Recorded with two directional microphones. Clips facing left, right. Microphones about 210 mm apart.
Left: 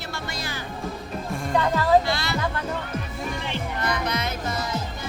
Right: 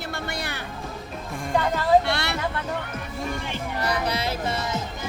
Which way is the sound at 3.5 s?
35° right (ahead or behind).